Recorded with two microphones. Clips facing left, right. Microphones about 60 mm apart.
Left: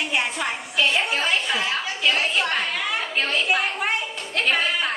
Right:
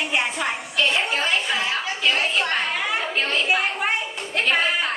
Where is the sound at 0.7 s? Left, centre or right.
Centre.